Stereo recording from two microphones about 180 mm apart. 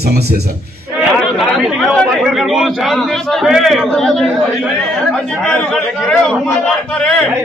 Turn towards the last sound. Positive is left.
turn(degrees=5)  # may be behind; listen again after turning